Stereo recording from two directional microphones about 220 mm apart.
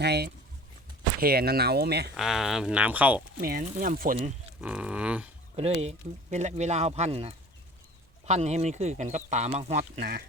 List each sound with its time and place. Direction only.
0.0 s speech: 50° right (ahead or behind)
2.1 s speech: centre (ahead or behind)
3.4 s speech: 40° right (ahead or behind)
4.6 s speech: 5° right (ahead or behind)
5.5 s speech: 30° right (ahead or behind)
10.0 s speech: 45° right (ahead or behind)